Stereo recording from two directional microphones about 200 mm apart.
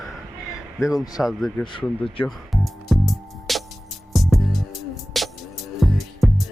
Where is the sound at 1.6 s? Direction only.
25° left (ahead or behind).